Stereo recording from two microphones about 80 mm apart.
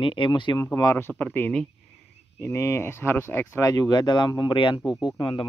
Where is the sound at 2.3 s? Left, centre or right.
Left.